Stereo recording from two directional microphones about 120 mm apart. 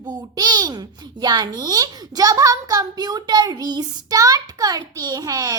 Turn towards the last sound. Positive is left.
turn(degrees=-30)  # may be behind; listen again after turning